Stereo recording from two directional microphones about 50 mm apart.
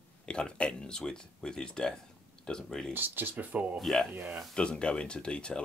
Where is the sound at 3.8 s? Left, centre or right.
Centre.